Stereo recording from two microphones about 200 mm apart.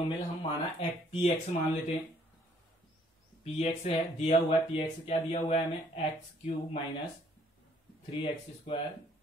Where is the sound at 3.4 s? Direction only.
30° left (ahead or behind).